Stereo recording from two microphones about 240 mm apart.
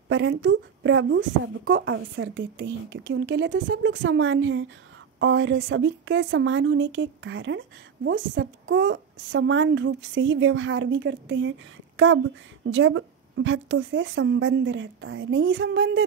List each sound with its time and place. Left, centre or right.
0.1 s speech: right
12.6 s speech: right